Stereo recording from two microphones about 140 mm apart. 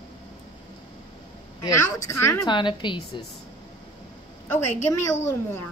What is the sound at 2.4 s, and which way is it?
Speech, 35° left (ahead or behind).